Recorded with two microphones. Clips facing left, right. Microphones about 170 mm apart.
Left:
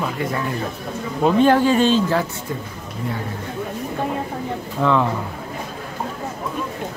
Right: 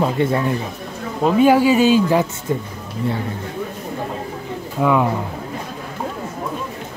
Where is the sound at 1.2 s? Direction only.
10° right (ahead or behind).